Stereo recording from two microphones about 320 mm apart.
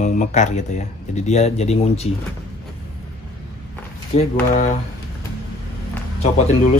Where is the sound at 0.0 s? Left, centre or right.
Left.